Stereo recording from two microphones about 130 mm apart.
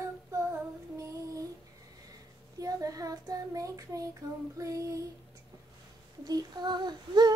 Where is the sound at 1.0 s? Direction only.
25° right (ahead or behind).